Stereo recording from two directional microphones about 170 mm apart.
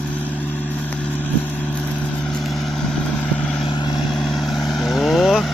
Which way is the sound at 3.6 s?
25° left (ahead or behind).